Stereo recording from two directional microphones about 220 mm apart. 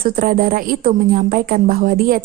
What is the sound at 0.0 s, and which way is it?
A woman's voice, 40° right (ahead or behind).